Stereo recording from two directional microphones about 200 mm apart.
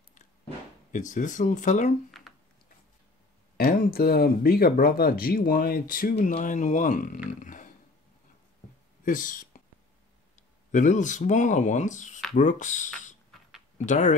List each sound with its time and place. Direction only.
0.9 s speech: 40° left (ahead or behind)
2.0 s a sound: centre (ahead or behind)
3.5 s speech: 50° left (ahead or behind)
7.2 s a sound: 40° left (ahead or behind)
9.0 s speech: 40° left (ahead or behind)
10.7 s speech: 40° left (ahead or behind)